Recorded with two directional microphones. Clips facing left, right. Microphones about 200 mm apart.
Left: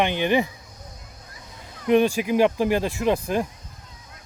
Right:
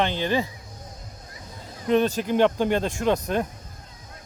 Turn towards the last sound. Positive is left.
turn(degrees=5)  # may be behind; listen again after turning